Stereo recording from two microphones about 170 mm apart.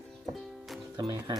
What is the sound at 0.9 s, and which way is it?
Music, 25° right (ahead or behind).